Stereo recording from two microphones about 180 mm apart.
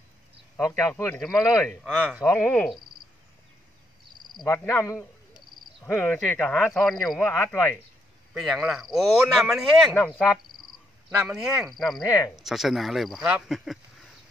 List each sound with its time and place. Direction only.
0.7 s speech: 15° left (ahead or behind)
1.2 s speech: centre (ahead or behind)
2.2 s speech: 10° left (ahead or behind)
4.3 s speech: 20° left (ahead or behind); by 7.2 s centre (ahead or behind)
7.2 s speech: 10° left (ahead or behind)
8.4 s speech: centre (ahead or behind)